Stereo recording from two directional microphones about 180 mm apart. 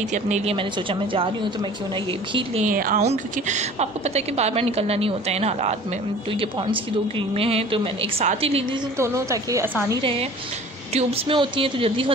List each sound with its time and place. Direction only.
0.1 s a woman's voice: 35° right (ahead or behind)
2.6 s speech: 50° right (ahead or behind)
3.0 s a woman's voice: 40° right (ahead or behind)
8.9 s a woman's voice: 15° right (ahead or behind)
10.9 s a woman's voice: 35° right (ahead or behind)